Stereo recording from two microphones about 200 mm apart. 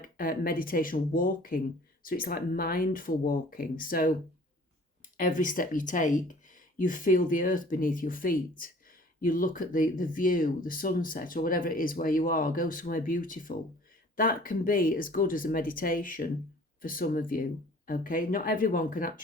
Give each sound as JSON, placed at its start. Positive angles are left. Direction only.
{"t": 0.0, "sound": "speech", "side_deg": 45}
{"t": 5.1, "sound": "speech", "side_deg": 40}